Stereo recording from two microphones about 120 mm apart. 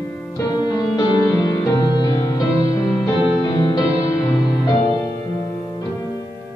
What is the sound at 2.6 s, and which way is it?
Music, 30° left (ahead or behind).